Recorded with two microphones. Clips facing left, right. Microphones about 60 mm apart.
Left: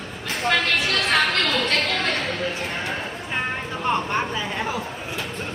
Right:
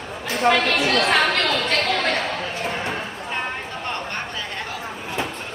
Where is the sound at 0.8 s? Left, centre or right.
Right.